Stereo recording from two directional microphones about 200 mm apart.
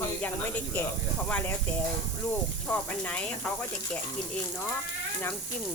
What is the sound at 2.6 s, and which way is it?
Speech, 5° left (ahead or behind).